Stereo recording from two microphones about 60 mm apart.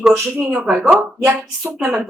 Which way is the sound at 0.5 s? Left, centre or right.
Centre.